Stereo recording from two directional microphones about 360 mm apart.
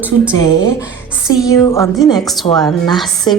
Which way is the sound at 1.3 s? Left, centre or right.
Centre.